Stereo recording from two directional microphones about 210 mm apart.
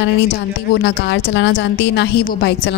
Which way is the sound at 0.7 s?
55° left (ahead or behind).